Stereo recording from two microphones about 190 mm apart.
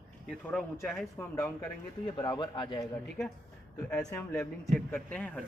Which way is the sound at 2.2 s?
25° left (ahead or behind).